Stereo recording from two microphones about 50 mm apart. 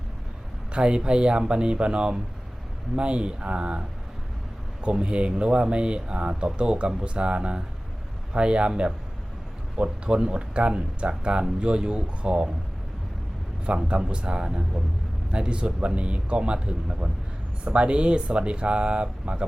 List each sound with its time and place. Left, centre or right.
0.7 s speech: centre
13.8 s speech: centre